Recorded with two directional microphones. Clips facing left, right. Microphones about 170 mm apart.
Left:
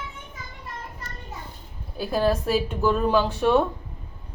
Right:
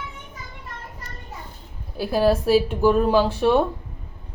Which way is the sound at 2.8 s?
10° right (ahead or behind).